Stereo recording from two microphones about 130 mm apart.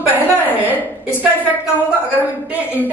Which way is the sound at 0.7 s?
15° left (ahead or behind).